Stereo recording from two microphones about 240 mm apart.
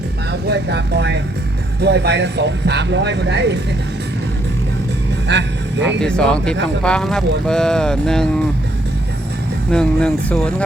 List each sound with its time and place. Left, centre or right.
0.5 s speech: right
5.3 s speech: right
6.0 s speech: centre
9.7 s speech: centre